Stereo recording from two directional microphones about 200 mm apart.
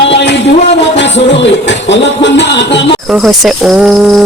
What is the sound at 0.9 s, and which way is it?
Music, 65° left (ahead or behind).